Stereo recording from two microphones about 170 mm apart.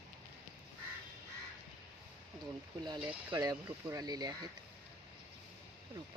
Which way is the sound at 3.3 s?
25° right (ahead or behind).